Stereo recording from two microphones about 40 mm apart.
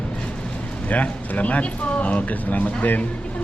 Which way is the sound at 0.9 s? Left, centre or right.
Left.